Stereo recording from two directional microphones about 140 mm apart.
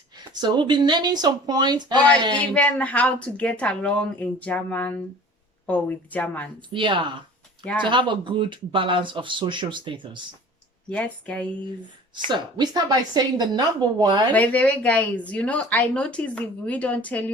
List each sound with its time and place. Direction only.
0.3 s speech: 35° right (ahead or behind)
2.3 s speech: 10° left (ahead or behind)
6.7 s speech: 35° right (ahead or behind)
7.6 s speech: 10° left (ahead or behind)
7.9 s speech: 35° right (ahead or behind)
10.8 s speech: 10° left (ahead or behind)
12.3 s speech: 30° right (ahead or behind)
14.3 s speech: 10° left (ahead or behind)